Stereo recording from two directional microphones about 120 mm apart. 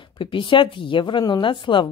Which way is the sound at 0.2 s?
45° left (ahead or behind).